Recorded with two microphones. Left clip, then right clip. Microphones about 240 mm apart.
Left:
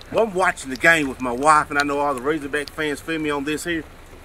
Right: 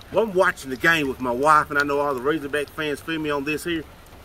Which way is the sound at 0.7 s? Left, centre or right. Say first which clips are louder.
Left 3 dB; centre.